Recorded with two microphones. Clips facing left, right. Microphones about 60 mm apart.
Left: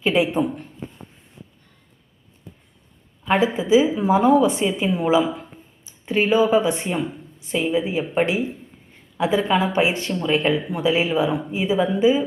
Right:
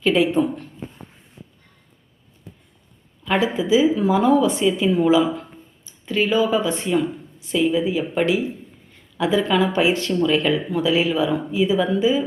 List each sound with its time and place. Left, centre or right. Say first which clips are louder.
0.0 s speech: right 2 dB; centre
3.2 s a woman's voice: left 1 dB; left
5.2 s speech: right 3 dB; centre
5.8 s a woman's voice: left 1 dB; left